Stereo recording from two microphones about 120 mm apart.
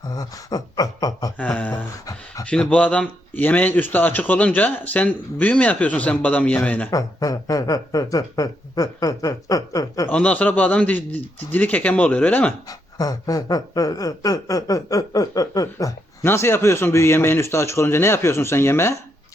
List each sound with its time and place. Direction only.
0.1 s speech: 30° left (ahead or behind)
1.4 s a sound: 10° left (ahead or behind)
2.4 s a man's voice: 10° left (ahead or behind)
6.9 s speech: 30° left (ahead or behind)
10.1 s a man's voice: 10° left (ahead or behind)
12.6 s speech: 30° left (ahead or behind)